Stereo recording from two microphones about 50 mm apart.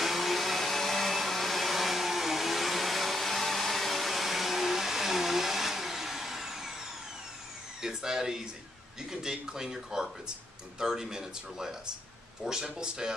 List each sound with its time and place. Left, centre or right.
0.0 s vacuum cleaner: centre
7.8 s speech: centre